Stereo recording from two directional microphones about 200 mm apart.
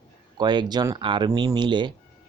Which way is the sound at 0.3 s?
20° right (ahead or behind).